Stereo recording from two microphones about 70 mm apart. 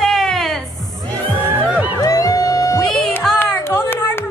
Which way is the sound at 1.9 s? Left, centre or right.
Left.